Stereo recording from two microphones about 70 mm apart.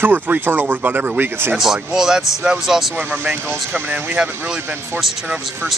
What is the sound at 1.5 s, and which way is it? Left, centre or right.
Speech, centre.